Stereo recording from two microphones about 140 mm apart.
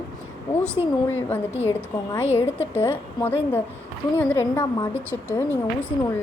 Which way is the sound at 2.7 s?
15° left (ahead or behind).